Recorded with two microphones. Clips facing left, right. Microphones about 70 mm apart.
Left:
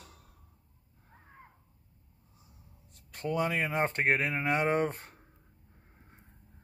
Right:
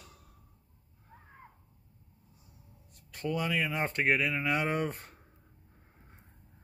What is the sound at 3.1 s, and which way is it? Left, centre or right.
Speech, left.